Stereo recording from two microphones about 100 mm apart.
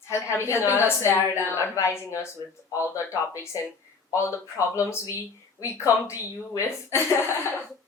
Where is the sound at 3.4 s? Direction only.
30° left (ahead or behind).